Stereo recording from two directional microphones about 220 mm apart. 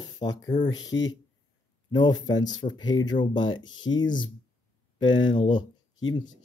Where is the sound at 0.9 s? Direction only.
60° left (ahead or behind).